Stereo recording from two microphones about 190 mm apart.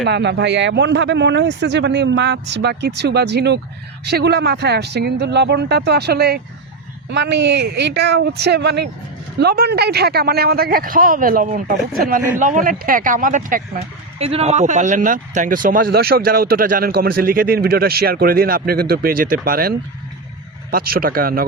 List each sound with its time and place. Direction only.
0.0 s speech: 65° right (ahead or behind); by 13.8 s 45° right (ahead or behind)
14.2 s speech: 30° right (ahead or behind); by 21.4 s 50° right (ahead or behind)